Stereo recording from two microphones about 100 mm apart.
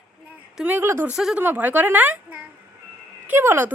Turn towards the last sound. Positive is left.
turn(degrees=-20)  # may be behind; listen again after turning